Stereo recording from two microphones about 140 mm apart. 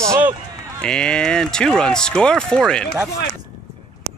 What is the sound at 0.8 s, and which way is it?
Speech, 5° left (ahead or behind).